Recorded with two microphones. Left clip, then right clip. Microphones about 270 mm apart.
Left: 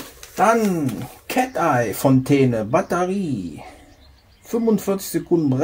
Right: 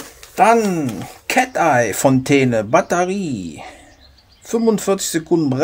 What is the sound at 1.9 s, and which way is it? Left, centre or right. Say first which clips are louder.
Speech: right 3 dB; right.